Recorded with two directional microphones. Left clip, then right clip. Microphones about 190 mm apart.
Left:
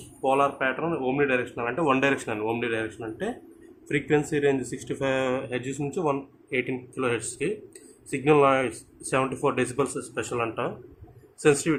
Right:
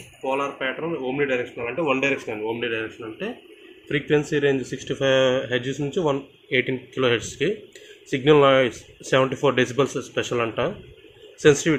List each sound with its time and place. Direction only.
0.2 s speech: 35° left (ahead or behind)
2.6 s speech: 15° left (ahead or behind)
3.8 s speech: 10° right (ahead or behind)